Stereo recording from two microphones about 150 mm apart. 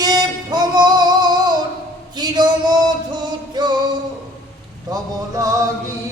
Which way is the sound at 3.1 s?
30° right (ahead or behind).